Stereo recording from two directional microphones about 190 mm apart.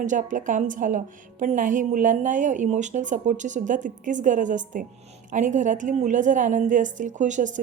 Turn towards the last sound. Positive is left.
turn(degrees=-40)  # may be behind; listen again after turning